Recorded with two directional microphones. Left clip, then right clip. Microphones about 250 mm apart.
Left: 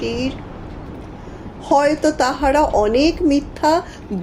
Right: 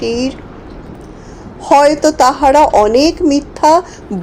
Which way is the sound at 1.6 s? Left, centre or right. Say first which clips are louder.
Right 7 dB; centre.